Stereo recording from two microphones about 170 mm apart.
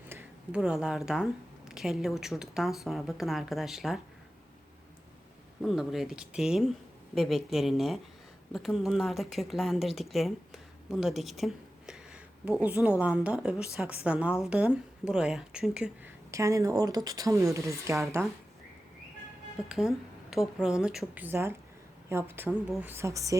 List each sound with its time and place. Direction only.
0.1 s speech: 10° right (ahead or behind)
5.6 s a woman's voice: centre (ahead or behind)
16.3 s a woman's voice: 20° right (ahead or behind)
19.6 s a woman's voice: 5° right (ahead or behind); by 23.4 s 20° right (ahead or behind)